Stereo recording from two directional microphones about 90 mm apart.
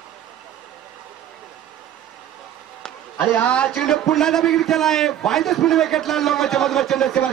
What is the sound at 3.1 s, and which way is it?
A man's voice, 20° left (ahead or behind).